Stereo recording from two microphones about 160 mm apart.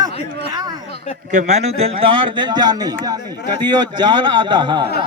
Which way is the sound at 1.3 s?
50° right (ahead or behind).